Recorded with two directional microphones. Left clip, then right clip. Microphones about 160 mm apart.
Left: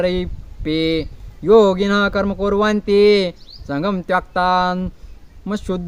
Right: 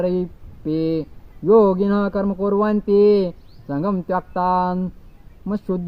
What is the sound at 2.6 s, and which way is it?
Speech, 50° left (ahead or behind).